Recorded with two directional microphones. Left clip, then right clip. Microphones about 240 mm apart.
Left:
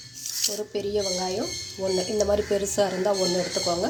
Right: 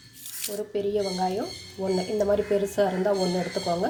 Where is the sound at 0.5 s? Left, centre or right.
Centre.